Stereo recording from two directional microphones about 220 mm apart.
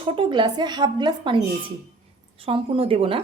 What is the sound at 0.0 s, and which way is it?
A woman's voice, 20° right (ahead or behind).